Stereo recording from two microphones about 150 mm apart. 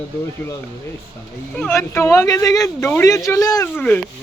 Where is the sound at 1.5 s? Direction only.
10° left (ahead or behind).